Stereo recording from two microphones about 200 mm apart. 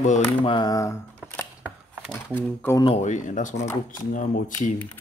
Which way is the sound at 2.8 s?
30° left (ahead or behind).